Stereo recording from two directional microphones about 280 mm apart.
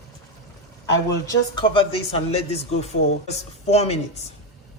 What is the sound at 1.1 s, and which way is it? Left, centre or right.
Speech, centre.